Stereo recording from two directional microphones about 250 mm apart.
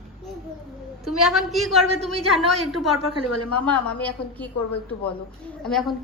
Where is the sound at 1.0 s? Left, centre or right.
Centre.